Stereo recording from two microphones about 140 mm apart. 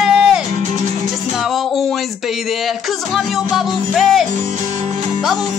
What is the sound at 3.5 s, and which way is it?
Speech, centre (ahead or behind).